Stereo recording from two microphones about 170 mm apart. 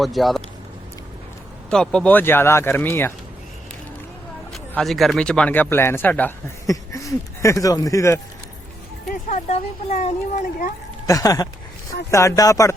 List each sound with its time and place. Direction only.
0.0 s speech: centre (ahead or behind)
1.7 s speech: 5° left (ahead or behind)
4.5 s speech: centre (ahead or behind); by 8.2 s 20° left (ahead or behind)
9.3 s speech: 40° left (ahead or behind)
11.0 s speech: 20° left (ahead or behind)